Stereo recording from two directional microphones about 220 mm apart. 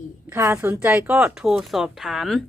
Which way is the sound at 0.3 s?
10° right (ahead or behind).